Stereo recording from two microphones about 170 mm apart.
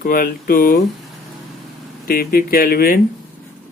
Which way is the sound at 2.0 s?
60° left (ahead or behind).